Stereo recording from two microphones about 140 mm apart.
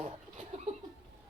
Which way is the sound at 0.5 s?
45° right (ahead or behind).